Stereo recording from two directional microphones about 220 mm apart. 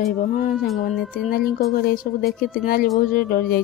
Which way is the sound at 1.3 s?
40° left (ahead or behind).